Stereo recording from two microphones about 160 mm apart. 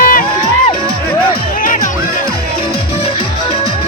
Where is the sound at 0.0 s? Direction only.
60° left (ahead or behind).